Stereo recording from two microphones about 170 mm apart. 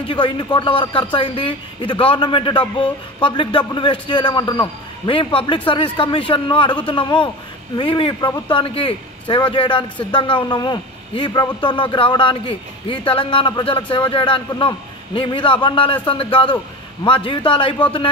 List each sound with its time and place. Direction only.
0.1 s a man's voice: 30° left (ahead or behind)